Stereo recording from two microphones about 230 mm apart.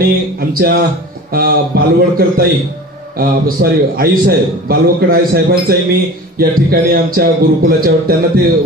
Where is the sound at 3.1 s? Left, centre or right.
Right.